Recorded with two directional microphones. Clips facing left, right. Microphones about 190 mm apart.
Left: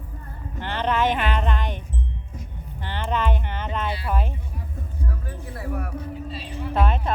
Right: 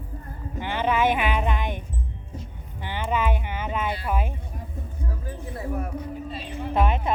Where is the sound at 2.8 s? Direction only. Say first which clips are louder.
Even; 10° right (ahead or behind).